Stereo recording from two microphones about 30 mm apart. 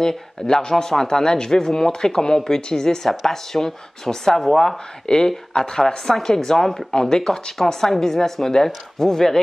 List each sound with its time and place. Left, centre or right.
0.1 s speech: centre
5.0 s speech: left
6.9 s speech: left
7.2 s speech: centre